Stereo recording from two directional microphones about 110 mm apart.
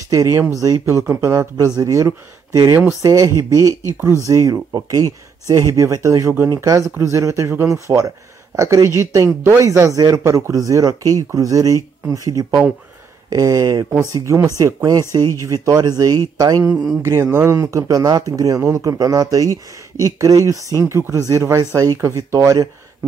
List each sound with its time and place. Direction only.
0.1 s speech: 30° right (ahead or behind)